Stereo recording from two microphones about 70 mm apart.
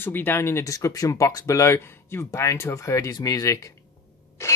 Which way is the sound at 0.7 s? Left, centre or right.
Left.